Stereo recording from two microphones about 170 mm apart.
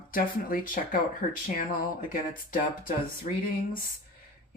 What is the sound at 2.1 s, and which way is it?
Speech, 50° left (ahead or behind).